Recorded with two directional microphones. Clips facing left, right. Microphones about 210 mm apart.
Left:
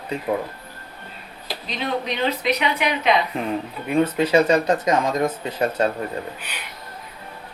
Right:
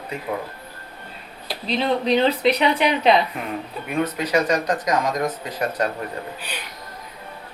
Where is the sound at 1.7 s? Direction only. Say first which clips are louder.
Right 6 dB; 30° right (ahead or behind).